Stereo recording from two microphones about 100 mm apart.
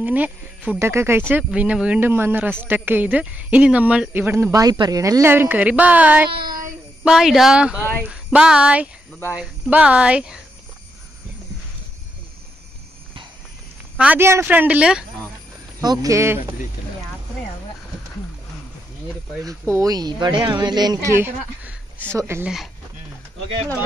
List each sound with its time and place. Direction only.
0.0 s speech: 15° right (ahead or behind)
1.3 s speech: 15° right (ahead or behind)
4.5 s speech: 40° right (ahead or behind)
5.2 s speech: 20° right (ahead or behind)
7.1 s speech: 5° right (ahead or behind)
13.9 s speech: 15° right (ahead or behind)
15.8 s speech: 40° right (ahead or behind)
19.7 s speech: 35° right (ahead or behind)
21.2 s speech: 20° right (ahead or behind)